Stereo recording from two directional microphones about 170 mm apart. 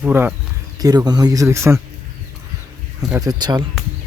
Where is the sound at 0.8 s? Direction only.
25° right (ahead or behind).